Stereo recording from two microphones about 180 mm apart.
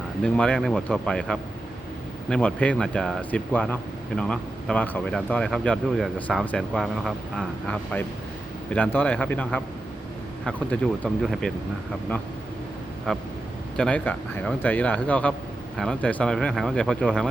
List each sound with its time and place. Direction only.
0.2 s speech: 5° left (ahead or behind)
13.1 s speech: 5° left (ahead or behind)